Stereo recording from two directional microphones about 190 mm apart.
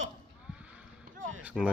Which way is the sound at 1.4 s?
10° right (ahead or behind).